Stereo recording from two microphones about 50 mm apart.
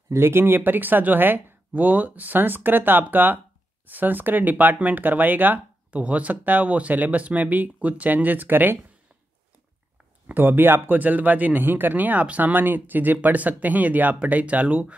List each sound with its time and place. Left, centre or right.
0.1 s speech: right
0.6 s speech: right
10.2 s speech: right